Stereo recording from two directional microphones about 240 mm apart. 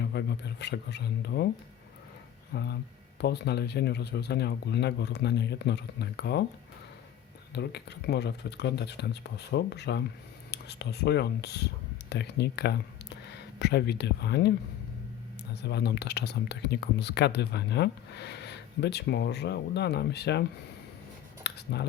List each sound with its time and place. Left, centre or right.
0.0 s speech: left
2.5 s speech: left
7.5 s speech: left
15.6 s speech: left
21.4 s a sound: left